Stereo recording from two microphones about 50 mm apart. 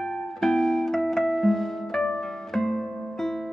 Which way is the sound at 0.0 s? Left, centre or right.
Centre.